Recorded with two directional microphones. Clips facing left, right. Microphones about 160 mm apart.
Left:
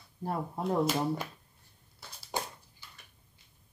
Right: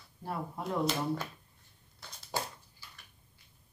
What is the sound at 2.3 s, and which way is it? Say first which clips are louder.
Dog: left 1 dB; 15° left (ahead or behind).